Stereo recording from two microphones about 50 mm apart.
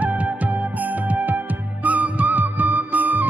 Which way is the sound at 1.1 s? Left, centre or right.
Right.